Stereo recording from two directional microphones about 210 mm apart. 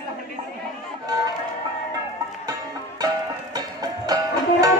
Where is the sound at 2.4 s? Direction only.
20° right (ahead or behind).